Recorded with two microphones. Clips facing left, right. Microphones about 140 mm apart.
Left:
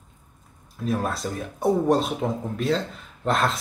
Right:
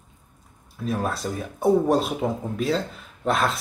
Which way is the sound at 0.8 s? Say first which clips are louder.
Even; centre (ahead or behind).